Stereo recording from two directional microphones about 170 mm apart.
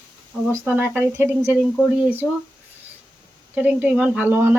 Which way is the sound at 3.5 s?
10° right (ahead or behind).